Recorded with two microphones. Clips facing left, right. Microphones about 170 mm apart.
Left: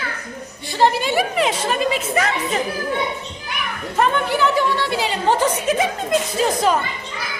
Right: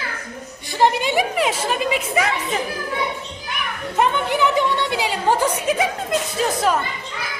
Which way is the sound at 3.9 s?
15° right (ahead or behind).